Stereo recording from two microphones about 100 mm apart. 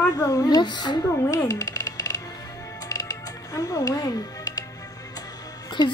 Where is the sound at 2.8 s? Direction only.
35° left (ahead or behind).